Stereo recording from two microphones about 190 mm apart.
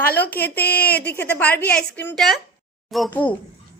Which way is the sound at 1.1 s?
10° left (ahead or behind).